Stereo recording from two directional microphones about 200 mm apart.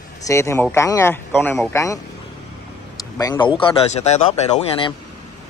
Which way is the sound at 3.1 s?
20° left (ahead or behind).